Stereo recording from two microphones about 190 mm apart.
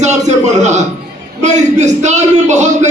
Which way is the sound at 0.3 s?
40° right (ahead or behind).